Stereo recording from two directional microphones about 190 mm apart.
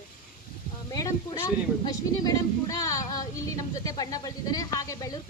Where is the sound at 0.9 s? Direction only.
20° left (ahead or behind).